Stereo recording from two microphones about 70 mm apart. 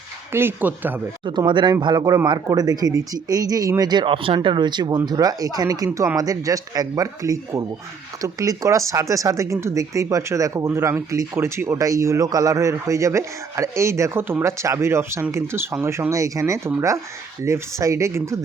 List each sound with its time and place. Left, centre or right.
0.3 s speech: right
1.5 s speech: right
1.9 s speech: right
5.0 s a man's voice: right
11.3 s a man's voice: right